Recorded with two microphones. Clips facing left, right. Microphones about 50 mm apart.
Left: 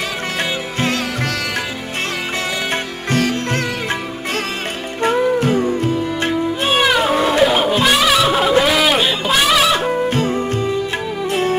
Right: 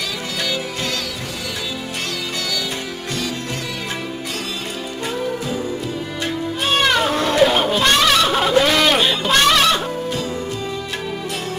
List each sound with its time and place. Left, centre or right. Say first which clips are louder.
5.0 s music: left 10 dB; left
6.7 s music: left 2 dB; centre
7.8 s a sound: even; centre